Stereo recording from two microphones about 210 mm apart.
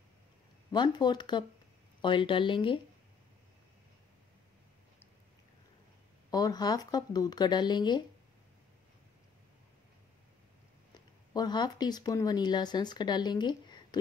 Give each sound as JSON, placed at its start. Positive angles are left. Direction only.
{"t": 0.7, "sound": "speech", "side_deg": 20}
{"t": 6.3, "sound": "speech", "side_deg": 20}
{"t": 11.3, "sound": "speech", "side_deg": 20}